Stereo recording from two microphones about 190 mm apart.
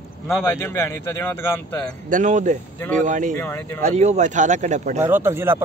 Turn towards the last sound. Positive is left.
turn(degrees=-10)  # may be behind; listen again after turning